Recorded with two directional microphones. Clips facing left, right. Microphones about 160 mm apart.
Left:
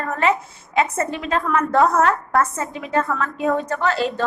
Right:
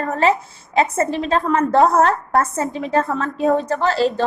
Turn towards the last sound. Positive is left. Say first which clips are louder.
# right 3 dB
turn(degrees=-35)  # may be behind; listen again after turning